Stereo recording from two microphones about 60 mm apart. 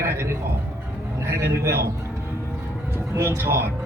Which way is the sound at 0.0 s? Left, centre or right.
Right.